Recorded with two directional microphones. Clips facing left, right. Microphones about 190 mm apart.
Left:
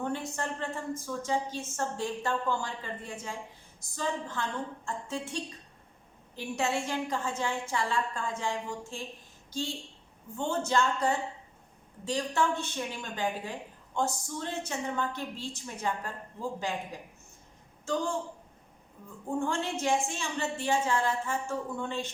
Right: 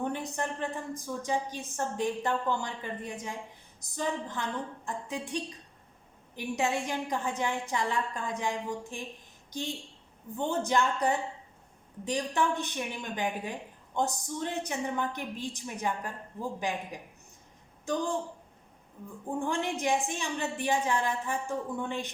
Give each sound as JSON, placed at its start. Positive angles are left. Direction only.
{"t": 0.0, "sound": "a woman's voice", "side_deg": -15}
{"t": 19.4, "sound": "a woman's voice", "side_deg": -15}